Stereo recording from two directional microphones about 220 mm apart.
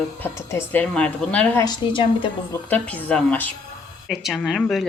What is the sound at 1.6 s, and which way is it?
Speech, 20° left (ahead or behind).